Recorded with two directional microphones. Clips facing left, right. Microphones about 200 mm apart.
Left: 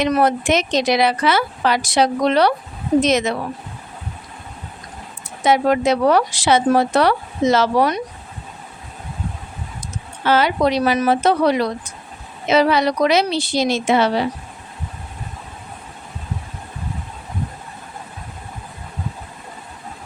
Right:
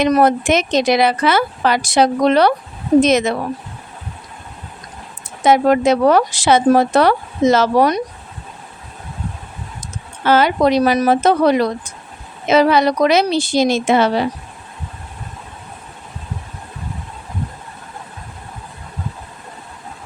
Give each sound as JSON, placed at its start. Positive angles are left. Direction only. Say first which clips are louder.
{"t": 0.0, "sound": "speech", "louder": "right 3 dB", "side_deg": -50}
{"t": 5.5, "sound": "speech", "louder": "right 3 dB", "side_deg": -50}
{"t": 10.2, "sound": "speech", "louder": "right 3 dB", "side_deg": -50}